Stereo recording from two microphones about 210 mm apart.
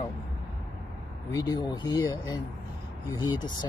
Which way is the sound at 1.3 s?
20° left (ahead or behind).